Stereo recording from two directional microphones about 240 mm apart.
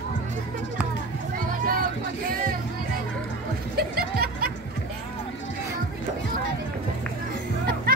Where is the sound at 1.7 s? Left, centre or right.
Right.